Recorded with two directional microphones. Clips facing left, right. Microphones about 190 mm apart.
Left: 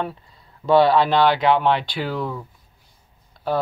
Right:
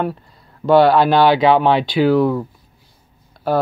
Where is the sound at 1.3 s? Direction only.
90° right.